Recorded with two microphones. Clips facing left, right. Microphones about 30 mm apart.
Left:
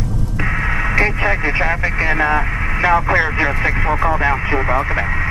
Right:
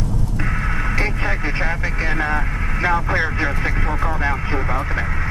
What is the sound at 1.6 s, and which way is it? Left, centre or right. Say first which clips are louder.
Speech: left 5 dB; left.